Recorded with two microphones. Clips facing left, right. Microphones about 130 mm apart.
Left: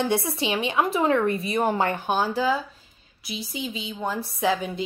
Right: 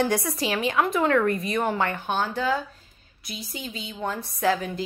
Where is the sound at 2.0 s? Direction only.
5° left (ahead or behind).